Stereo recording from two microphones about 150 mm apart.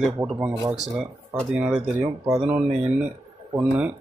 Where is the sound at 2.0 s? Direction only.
25° right (ahead or behind).